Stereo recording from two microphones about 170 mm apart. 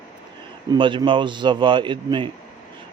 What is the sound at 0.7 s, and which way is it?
A man's voice, 25° right (ahead or behind).